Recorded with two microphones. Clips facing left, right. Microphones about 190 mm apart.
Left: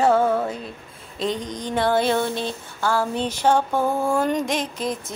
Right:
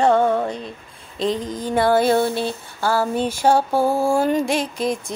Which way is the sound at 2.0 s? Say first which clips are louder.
Right 4 dB; 40° right (ahead or behind).